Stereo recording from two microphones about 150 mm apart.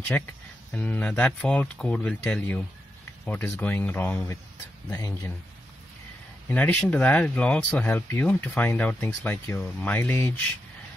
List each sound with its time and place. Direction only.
0.1 s speech: 10° left (ahead or behind)
6.5 s speech: 10° left (ahead or behind)